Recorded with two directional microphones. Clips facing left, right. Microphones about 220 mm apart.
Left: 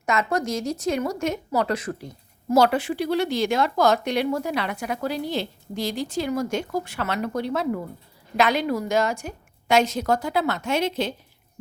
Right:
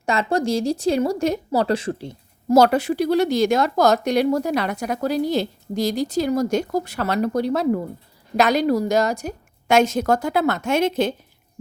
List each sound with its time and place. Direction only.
0.0 s speech: 30° right (ahead or behind)
2.6 s a woman's voice: 40° right (ahead or behind)